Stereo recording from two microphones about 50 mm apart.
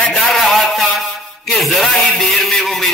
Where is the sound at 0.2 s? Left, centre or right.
Centre.